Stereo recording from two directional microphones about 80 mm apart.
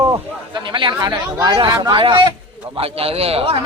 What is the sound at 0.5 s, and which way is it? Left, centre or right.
Speech, right.